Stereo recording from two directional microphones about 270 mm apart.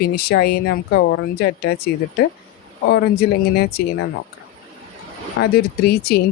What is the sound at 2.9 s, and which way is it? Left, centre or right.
Speech, left.